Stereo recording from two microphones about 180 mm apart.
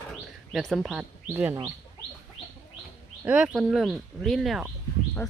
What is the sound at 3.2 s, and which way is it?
Speech, 5° right (ahead or behind).